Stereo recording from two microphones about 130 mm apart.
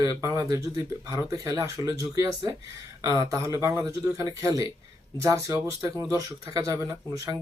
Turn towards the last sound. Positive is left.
turn(degrees=-25)  # may be behind; listen again after turning